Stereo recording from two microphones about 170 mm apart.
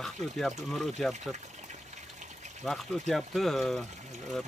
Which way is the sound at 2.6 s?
Centre (ahead or behind).